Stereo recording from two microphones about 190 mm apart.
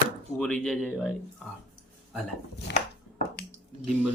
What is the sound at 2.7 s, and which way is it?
Chopping, 65° left (ahead or behind).